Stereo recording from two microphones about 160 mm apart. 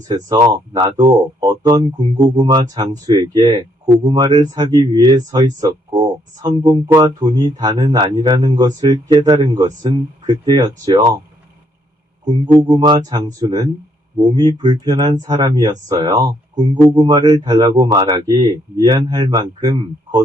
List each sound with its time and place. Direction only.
0.1 s speech: 25° right (ahead or behind)
12.5 s speech: 25° right (ahead or behind)